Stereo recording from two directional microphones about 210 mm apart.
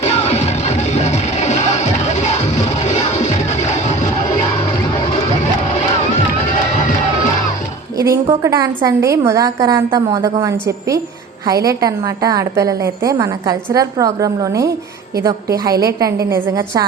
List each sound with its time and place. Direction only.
0.0 s music: 30° left (ahead or behind)
6.7 s crowd: 35° left (ahead or behind)
8.1 s a woman's voice: 15° right (ahead or behind)